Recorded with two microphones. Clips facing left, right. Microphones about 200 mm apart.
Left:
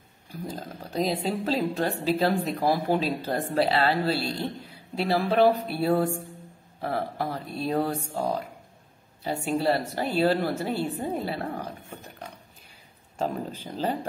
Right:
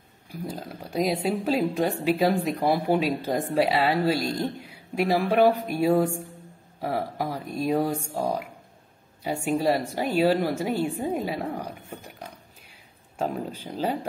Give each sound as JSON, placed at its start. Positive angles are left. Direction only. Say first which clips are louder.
{"t": 0.3, "sound": "a woman's voice", "louder": "right 1 dB", "side_deg": -10}
{"t": 7.2, "sound": "a woman's voice", "louder": "right 2 dB", "side_deg": -10}
{"t": 9.2, "sound": "a woman's voice", "louder": "right 2 dB", "side_deg": -10}
{"t": 13.2, "sound": "a woman's voice", "louder": "right 1 dB", "side_deg": -10}